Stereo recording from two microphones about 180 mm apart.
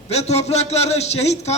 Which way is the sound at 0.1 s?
35° left (ahead or behind).